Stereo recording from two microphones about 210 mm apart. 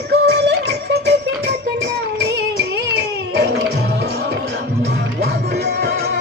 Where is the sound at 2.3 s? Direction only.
55° right (ahead or behind).